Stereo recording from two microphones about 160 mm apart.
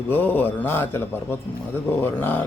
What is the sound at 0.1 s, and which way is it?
Speech, 10° left (ahead or behind).